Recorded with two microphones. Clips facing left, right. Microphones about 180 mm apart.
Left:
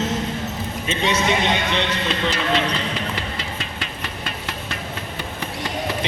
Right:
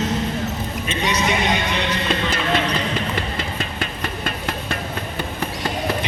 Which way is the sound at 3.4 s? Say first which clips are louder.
Right 4 dB; 50° right (ahead or behind).